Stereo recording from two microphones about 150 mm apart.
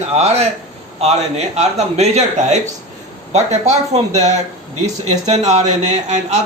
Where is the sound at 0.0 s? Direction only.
45° right (ahead or behind).